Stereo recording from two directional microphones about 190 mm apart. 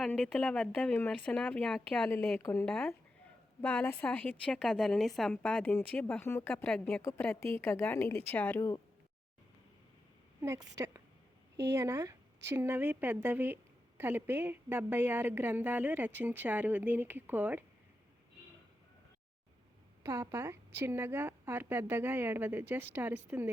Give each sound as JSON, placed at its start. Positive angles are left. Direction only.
{"t": 0.0, "sound": "a woman's voice", "side_deg": 0}
{"t": 10.4, "sound": "a woman's voice", "side_deg": -15}
{"t": 20.0, "sound": "a woman's voice", "side_deg": -15}